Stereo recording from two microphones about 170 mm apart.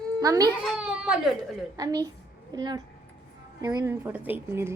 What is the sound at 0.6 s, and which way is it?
Speech, 5° right (ahead or behind).